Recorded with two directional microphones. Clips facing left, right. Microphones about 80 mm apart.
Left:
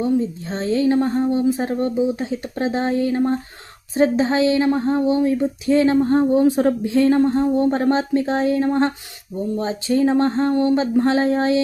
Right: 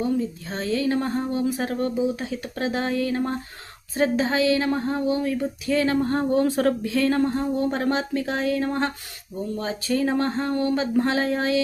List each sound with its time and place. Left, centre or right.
0.0 s a woman's voice: left